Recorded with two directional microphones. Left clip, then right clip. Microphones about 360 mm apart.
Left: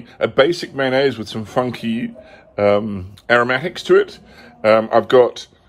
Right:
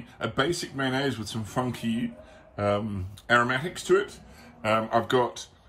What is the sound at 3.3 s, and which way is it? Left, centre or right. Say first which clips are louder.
Speech: left 8 dB; left.